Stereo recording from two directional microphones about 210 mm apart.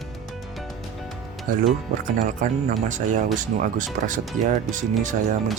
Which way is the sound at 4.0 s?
50° right (ahead or behind).